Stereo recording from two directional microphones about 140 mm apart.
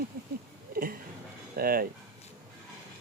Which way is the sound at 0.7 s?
90° right.